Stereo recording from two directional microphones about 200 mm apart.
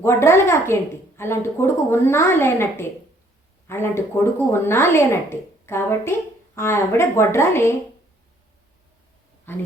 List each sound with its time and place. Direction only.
0.0 s a woman's voice: 10° left (ahead or behind)
9.5 s a woman's voice: 10° left (ahead or behind)